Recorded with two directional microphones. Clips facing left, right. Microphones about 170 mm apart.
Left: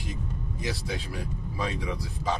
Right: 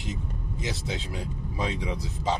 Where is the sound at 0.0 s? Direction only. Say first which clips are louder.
Right 1 dB; 20° right (ahead or behind).